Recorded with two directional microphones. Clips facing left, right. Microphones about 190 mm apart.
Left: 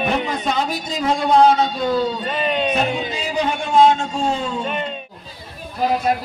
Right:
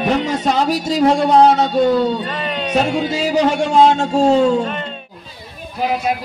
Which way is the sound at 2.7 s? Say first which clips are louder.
Right 4 dB; 90° right.